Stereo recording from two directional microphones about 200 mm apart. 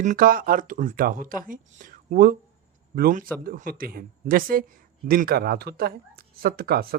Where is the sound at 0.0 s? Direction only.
40° right (ahead or behind).